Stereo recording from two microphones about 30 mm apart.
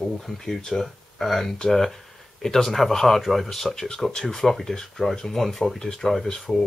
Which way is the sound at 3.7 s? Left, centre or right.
Centre.